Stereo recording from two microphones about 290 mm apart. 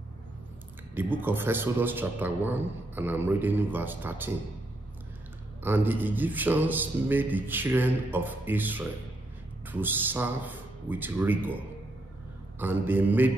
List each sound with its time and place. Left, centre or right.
0.9 s a man's voice: centre
5.6 s a man's voice: centre